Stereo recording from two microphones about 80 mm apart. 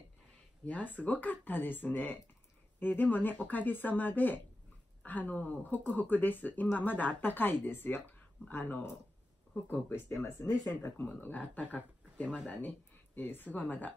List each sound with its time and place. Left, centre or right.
0.7 s speech: centre; by 10.5 s left
10.7 s speech: left